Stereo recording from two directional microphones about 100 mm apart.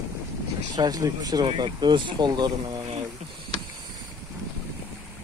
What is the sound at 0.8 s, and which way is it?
Speech, 40° right (ahead or behind).